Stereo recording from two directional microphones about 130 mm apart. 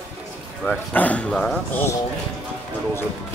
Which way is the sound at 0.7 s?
10° left (ahead or behind).